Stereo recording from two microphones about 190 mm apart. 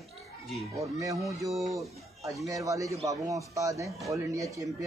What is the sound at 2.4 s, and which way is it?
A man's voice, 15° right (ahead or behind).